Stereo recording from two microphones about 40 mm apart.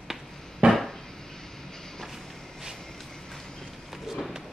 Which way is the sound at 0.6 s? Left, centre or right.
Right.